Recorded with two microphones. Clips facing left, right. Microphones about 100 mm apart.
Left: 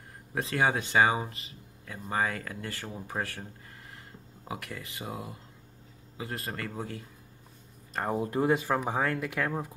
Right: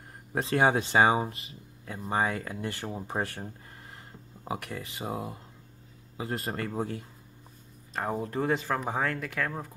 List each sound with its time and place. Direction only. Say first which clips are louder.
0.3 s speech: right 3 dB; 30° right (ahead or behind)
4.5 s speech: right 4 dB; 25° right (ahead or behind)
7.9 s speech: left 1 dB; 5° left (ahead or behind)